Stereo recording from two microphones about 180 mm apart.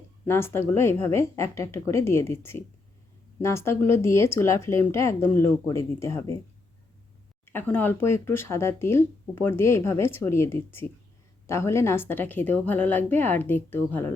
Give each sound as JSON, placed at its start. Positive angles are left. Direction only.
{"t": 0.3, "sound": "speech", "side_deg": 15}
{"t": 7.4, "sound": "speech", "side_deg": 10}